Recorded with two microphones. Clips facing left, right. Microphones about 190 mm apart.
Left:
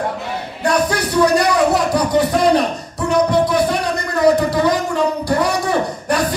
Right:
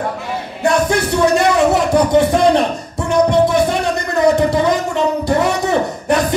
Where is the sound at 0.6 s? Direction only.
25° right (ahead or behind).